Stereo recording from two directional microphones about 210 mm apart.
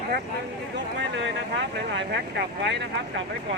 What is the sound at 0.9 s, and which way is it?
Speech, 55° right (ahead or behind).